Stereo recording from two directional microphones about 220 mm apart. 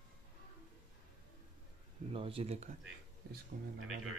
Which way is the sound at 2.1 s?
25° right (ahead or behind).